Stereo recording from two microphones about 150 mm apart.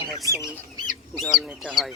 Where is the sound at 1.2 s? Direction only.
Centre (ahead or behind).